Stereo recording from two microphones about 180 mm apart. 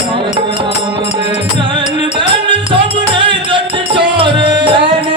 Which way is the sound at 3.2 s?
30° right (ahead or behind).